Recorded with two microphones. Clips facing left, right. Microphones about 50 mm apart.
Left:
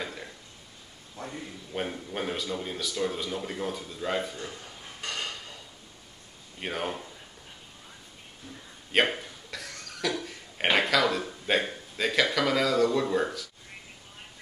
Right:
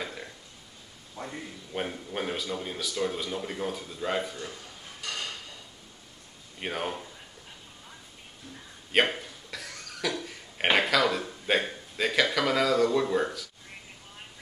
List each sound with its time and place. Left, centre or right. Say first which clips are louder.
0.0 s burping: even; centre
1.2 s a sound: right 1 dB; right
1.7 s speech: even; centre
5.0 s a sound: left 1 dB; left
6.6 s speech: even; centre
8.9 s cough: even; centre